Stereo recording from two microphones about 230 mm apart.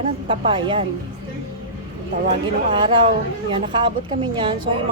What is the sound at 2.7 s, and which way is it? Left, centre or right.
A woman's voice, right.